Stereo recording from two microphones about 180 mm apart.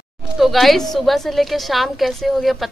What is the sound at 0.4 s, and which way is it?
A woman's voice, centre (ahead or behind).